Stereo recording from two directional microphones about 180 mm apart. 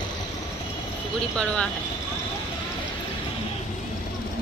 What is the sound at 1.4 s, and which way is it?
Speech, 5° left (ahead or behind).